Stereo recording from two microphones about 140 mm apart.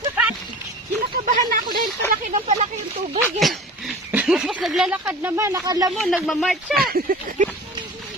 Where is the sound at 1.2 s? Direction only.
90° right.